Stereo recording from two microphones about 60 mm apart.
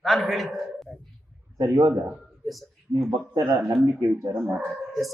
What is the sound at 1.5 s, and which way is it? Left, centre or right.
Speech, right.